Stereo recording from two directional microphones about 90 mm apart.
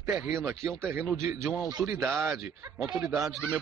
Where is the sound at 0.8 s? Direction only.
25° right (ahead or behind).